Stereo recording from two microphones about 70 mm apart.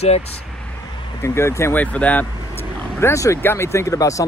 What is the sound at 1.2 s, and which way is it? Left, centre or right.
Speech, left.